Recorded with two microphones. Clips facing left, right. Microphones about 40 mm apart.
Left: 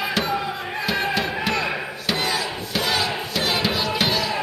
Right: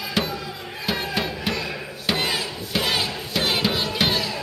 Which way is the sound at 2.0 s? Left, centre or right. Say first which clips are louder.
Right 1 dB; centre.